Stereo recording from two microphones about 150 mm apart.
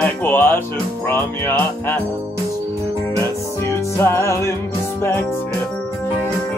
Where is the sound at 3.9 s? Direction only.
20° left (ahead or behind).